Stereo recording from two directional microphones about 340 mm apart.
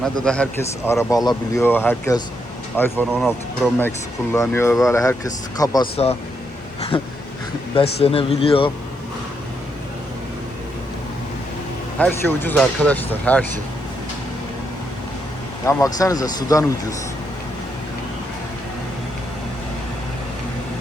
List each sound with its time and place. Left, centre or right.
0.0 s speech: centre
11.9 s speech: centre
15.6 s speech: centre